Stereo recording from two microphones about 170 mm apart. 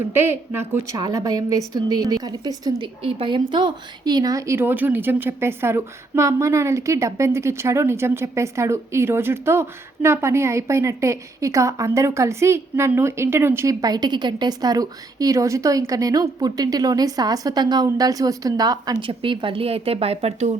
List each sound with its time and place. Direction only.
0.1 s a woman's voice: 15° right (ahead or behind)
3.0 s speech: 35° right (ahead or behind)